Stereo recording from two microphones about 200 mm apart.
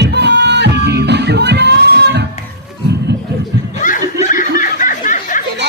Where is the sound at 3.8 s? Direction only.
40° left (ahead or behind).